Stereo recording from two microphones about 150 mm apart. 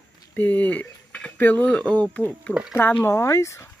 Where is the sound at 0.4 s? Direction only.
10° left (ahead or behind).